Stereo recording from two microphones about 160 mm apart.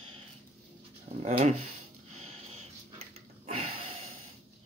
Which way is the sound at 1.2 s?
45° right (ahead or behind).